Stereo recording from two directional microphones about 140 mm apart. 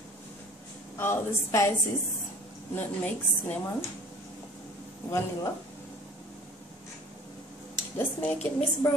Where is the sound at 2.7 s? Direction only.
15° left (ahead or behind).